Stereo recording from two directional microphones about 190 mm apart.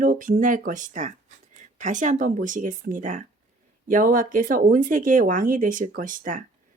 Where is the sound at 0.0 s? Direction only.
45° right (ahead or behind).